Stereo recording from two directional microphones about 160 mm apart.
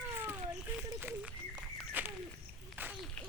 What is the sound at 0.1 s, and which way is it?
Children playing, 15° right (ahead or behind).